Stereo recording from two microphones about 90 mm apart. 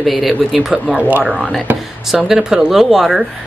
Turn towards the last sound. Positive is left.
turn(degrees=0)  # may be behind; listen again after turning